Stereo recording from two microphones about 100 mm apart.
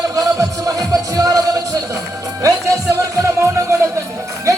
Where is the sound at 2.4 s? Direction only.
35° right (ahead or behind).